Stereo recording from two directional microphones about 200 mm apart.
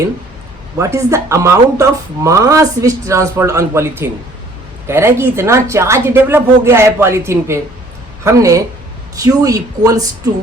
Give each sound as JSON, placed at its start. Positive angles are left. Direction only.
{"t": 0.8, "sound": "speech", "side_deg": -15}